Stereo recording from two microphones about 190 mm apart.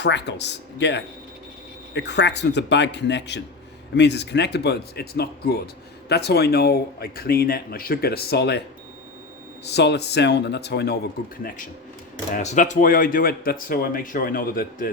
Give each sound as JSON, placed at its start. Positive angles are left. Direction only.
{"t": 0.0, "sound": "speech", "side_deg": 65}
{"t": 9.6, "sound": "speech", "side_deg": 60}
{"t": 12.3, "sound": "speech", "side_deg": 40}